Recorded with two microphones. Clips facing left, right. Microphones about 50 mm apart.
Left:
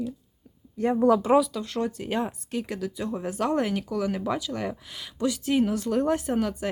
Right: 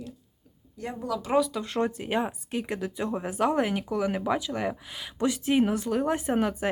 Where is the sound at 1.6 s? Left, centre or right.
Right.